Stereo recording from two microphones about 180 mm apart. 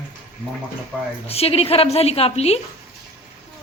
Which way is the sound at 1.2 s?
35° left (ahead or behind).